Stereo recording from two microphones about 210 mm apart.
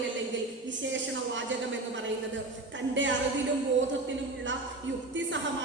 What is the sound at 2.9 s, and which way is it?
Speech, 60° right (ahead or behind).